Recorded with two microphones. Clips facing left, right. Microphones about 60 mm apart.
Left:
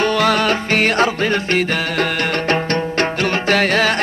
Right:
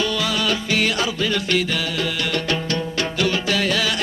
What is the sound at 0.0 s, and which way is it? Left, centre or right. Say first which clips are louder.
Music: left 7 dB; left.